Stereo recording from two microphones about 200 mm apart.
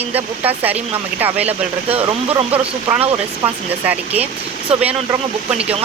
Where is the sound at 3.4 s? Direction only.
10° right (ahead or behind).